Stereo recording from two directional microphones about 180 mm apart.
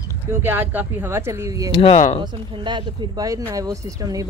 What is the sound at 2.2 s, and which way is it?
Speech, 25° right (ahead or behind).